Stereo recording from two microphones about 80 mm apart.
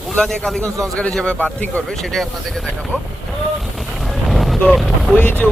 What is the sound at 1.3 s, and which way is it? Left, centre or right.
Speech, left.